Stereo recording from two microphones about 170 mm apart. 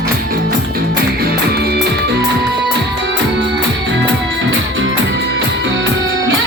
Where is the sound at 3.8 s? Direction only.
90° right.